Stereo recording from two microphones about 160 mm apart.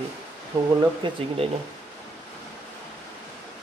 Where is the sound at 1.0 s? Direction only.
30° right (ahead or behind).